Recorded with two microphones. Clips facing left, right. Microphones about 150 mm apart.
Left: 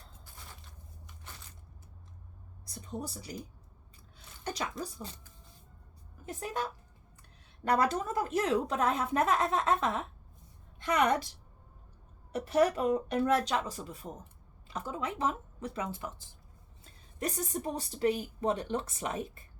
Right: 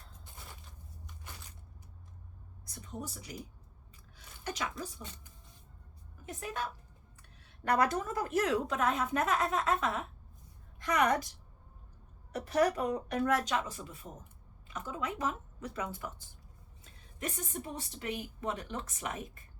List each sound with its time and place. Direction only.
0.3 s a sound: 20° right (ahead or behind)
2.6 s a woman's voice: 30° left (ahead or behind)
4.4 s a woman's voice: 30° left (ahead or behind)
6.2 s a woman's voice: 35° left (ahead or behind)
7.2 s a sound: 30° left (ahead or behind)
8.4 s a woman's voice: 35° left (ahead or behind)
12.3 s a woman's voice: 25° left (ahead or behind)